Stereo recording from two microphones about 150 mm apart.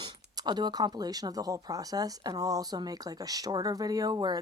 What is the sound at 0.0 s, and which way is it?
Speech, 30° right (ahead or behind).